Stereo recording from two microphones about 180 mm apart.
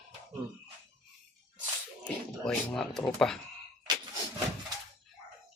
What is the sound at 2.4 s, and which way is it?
Speech, 5° left (ahead or behind).